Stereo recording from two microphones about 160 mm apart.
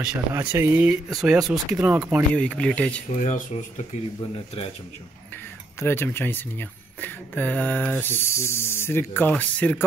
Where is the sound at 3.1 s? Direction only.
45° left (ahead or behind).